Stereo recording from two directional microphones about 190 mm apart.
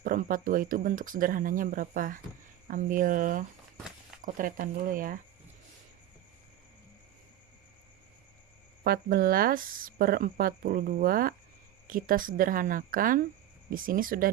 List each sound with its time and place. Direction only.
0.0 s speech: 45° right (ahead or behind)
8.8 s speech: 50° right (ahead or behind)